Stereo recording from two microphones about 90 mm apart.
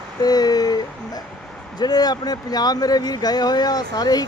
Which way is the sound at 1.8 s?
50° left (ahead or behind).